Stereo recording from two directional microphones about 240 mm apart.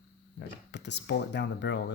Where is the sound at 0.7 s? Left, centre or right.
Left.